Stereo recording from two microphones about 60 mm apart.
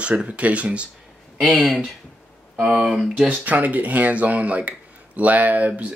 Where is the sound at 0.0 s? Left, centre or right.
Right.